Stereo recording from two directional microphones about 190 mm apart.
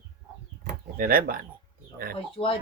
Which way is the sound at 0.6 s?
50° right (ahead or behind).